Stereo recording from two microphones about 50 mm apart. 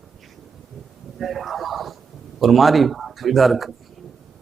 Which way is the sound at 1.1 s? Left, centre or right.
Centre.